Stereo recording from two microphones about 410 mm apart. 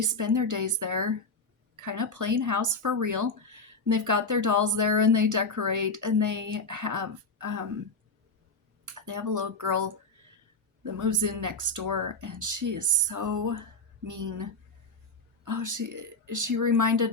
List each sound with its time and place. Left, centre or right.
0.0 s speech: right
8.8 s speech: right